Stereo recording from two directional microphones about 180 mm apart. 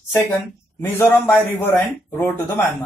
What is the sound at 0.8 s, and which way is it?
Speech, 10° left (ahead or behind).